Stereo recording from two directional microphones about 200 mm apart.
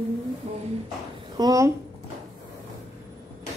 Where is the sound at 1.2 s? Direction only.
20° right (ahead or behind).